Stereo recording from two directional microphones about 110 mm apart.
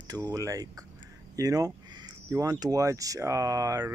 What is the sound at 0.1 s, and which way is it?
Speech, 35° right (ahead or behind).